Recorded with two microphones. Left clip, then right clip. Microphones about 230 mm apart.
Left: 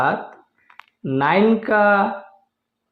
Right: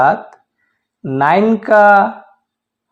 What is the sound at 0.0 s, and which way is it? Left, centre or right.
A man's voice, right.